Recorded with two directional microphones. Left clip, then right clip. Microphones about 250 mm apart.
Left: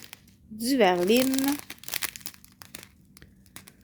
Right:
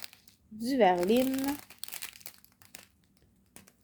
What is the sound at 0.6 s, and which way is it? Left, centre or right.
Speech, left.